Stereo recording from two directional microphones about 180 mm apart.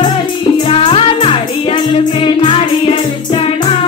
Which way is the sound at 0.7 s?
30° left (ahead or behind).